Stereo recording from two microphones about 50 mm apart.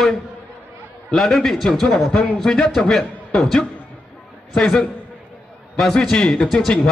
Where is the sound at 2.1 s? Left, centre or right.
Left.